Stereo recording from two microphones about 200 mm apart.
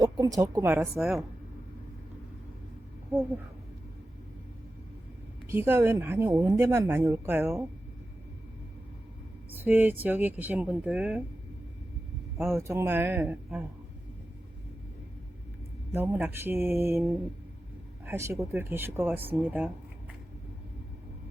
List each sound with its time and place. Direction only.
0.0 s speech: 20° right (ahead or behind)
0.9 s speech: centre (ahead or behind)
5.5 s speech: 10° right (ahead or behind)
9.5 s a sound: 10° right (ahead or behind)
10.0 s speech: 10° right (ahead or behind)
12.4 s speech: 15° right (ahead or behind)
15.9 s speech: 10° right (ahead or behind)
18.0 s speech: 10° right (ahead or behind)